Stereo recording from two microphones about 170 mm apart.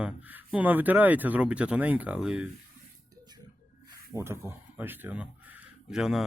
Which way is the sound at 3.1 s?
25° right (ahead or behind).